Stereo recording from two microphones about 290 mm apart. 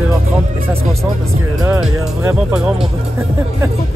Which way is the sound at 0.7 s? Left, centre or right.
Right.